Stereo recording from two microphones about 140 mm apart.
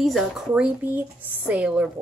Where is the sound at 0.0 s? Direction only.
Centre (ahead or behind).